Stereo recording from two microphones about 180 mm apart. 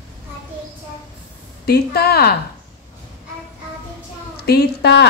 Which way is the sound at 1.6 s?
60° left (ahead or behind).